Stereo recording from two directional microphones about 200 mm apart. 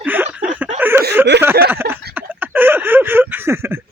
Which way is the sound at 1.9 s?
10° right (ahead or behind).